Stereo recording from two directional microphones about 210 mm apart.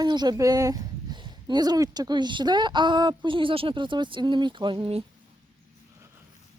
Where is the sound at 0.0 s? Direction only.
20° right (ahead or behind).